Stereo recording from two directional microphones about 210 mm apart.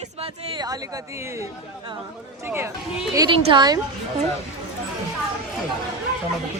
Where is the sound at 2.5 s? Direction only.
10° right (ahead or behind).